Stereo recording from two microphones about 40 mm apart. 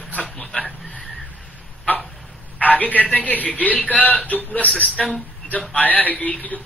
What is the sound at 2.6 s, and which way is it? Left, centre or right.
A man's voice, left.